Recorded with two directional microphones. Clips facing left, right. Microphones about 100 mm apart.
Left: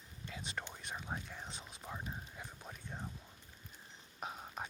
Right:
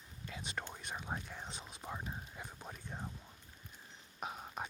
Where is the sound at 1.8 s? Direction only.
5° right (ahead or behind).